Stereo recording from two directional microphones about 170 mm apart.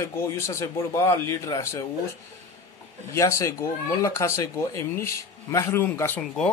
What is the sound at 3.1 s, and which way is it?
A man's voice, 15° left (ahead or behind).